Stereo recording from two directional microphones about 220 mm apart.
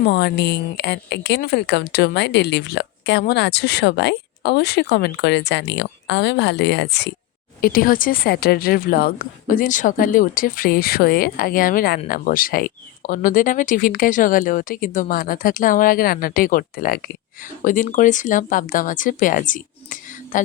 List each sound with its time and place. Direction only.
0.0 s a woman's voice: 50° left (ahead or behind)